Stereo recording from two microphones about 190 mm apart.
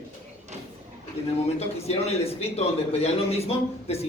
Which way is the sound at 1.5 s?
35° left (ahead or behind).